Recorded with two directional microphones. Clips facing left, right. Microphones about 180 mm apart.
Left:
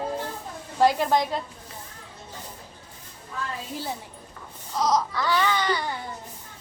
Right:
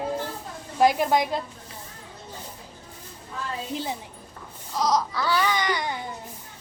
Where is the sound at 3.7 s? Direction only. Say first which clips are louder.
Right 4 dB; 15° right (ahead or behind).